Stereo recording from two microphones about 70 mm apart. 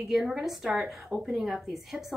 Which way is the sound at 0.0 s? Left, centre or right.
Centre.